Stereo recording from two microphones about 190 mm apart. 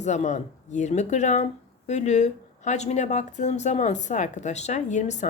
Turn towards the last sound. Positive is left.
turn(degrees=40)  # may be behind; listen again after turning